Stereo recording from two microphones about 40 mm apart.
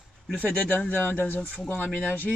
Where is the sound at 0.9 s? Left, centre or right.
Left.